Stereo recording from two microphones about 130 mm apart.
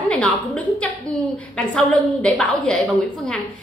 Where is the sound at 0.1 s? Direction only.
10° left (ahead or behind).